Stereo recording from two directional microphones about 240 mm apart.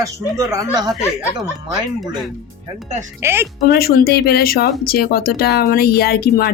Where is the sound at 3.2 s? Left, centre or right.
Centre.